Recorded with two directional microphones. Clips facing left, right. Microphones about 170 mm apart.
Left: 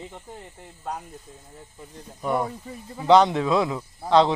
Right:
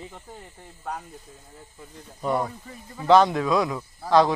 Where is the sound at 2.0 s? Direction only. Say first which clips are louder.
Even; 10° left (ahead or behind).